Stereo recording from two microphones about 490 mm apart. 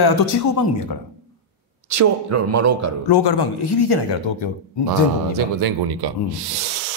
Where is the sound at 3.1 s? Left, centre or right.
Left.